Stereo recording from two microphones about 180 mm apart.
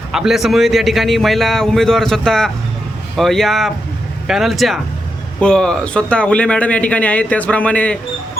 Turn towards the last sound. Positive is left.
turn(degrees=5)  # may be behind; listen again after turning